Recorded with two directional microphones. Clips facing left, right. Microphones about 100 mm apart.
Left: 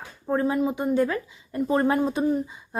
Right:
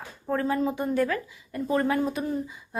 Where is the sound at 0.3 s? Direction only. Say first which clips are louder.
Left 2 dB; 20° left (ahead or behind).